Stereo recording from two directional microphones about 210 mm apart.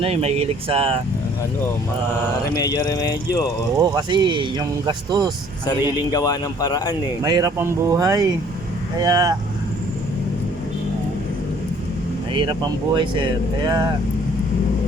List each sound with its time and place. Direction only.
0.0 s speech: 30° right (ahead or behind)
2.6 s speech: 20° left (ahead or behind)
3.8 s speech: 20° right (ahead or behind)
6.1 s speech: 20° left (ahead or behind)
7.2 s speech: 15° right (ahead or behind)
12.3 s speech: 20° right (ahead or behind)